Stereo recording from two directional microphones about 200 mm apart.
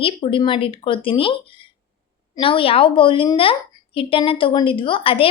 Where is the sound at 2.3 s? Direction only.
25° left (ahead or behind).